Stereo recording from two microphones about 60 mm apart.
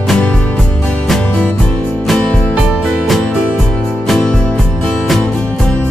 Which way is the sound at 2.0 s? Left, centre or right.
Centre.